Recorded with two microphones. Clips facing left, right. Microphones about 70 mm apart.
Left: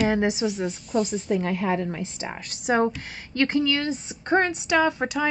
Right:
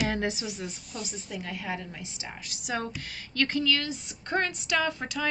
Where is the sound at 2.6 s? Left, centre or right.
Left.